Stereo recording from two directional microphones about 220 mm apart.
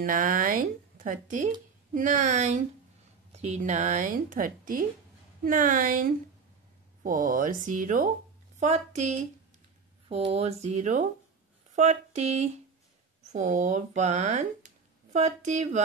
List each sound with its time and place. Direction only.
0.0 s speech: 40° right (ahead or behind)